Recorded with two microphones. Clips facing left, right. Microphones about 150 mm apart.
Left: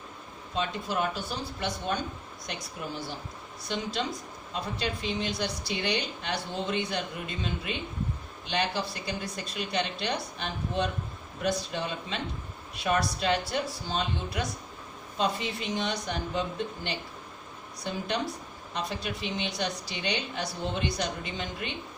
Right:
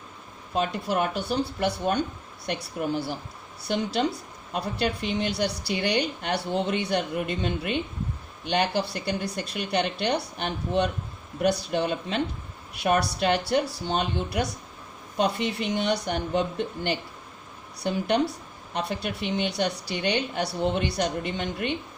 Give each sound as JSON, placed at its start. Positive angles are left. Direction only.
{"t": 0.5, "sound": "speech", "side_deg": -55}
{"t": 4.5, "sound": "speech", "side_deg": -65}
{"t": 17.8, "sound": "speech", "side_deg": -60}